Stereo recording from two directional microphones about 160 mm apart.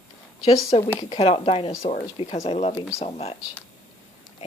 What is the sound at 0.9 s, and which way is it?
Speech, 35° left (ahead or behind).